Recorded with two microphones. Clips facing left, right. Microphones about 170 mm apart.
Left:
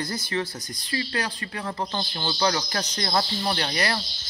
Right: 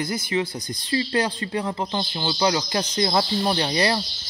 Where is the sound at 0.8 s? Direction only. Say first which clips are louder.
Right 6 dB; 25° right (ahead or behind).